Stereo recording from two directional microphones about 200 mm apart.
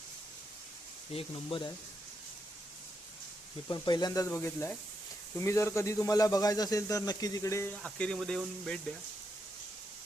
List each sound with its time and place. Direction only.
1.1 s speech: 25° left (ahead or behind)
3.7 s speech: 20° left (ahead or behind); by 8.8 s 5° left (ahead or behind)